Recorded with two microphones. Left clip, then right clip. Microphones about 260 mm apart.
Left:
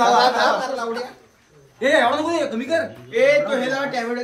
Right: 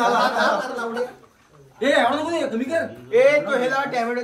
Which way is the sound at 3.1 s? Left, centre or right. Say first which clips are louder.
Even; right.